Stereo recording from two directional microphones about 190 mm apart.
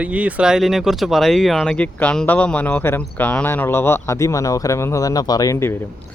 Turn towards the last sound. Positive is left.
turn(degrees=10)  # may be behind; listen again after turning